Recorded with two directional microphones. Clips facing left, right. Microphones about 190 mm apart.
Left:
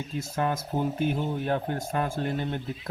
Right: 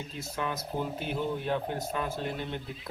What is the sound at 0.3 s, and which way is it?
Speech, 50° left (ahead or behind).